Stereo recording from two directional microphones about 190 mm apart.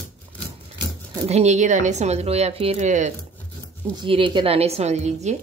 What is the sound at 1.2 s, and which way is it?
Speech, 35° right (ahead or behind).